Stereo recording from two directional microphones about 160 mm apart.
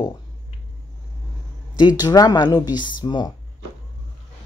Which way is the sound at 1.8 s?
25° left (ahead or behind).